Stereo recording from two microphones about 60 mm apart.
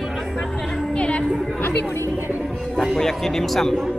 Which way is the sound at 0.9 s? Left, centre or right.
Centre.